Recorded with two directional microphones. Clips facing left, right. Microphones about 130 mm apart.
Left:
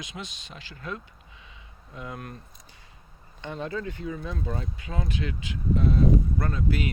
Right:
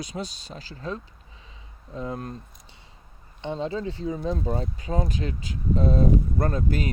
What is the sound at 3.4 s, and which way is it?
Speech, 25° right (ahead or behind).